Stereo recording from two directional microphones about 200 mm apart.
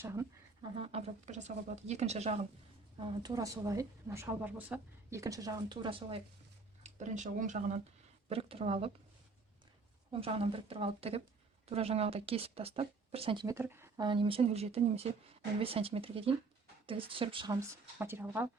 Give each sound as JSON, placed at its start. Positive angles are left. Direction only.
{"t": 0.0, "sound": "a sound", "side_deg": -15}
{"t": 0.8, "sound": "speech", "side_deg": -30}
{"t": 3.0, "sound": "a woman's voice", "side_deg": -20}
{"t": 6.8, "sound": "speech", "side_deg": -35}
{"t": 10.1, "sound": "a woman's voice", "side_deg": -30}